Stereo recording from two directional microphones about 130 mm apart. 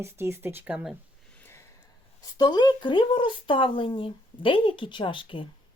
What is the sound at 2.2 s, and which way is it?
Speech, 30° left (ahead or behind).